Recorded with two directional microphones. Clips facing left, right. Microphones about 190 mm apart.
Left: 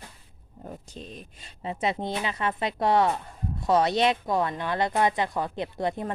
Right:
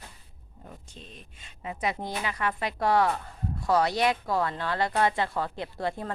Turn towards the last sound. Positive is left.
turn(degrees=20)  # may be behind; listen again after turning